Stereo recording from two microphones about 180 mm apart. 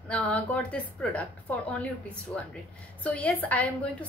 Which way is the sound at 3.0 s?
10° left (ahead or behind).